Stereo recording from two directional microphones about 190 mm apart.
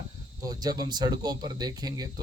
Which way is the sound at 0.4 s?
20° right (ahead or behind).